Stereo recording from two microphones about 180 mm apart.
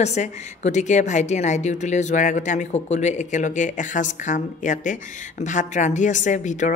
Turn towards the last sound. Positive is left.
turn(degrees=45)  # may be behind; listen again after turning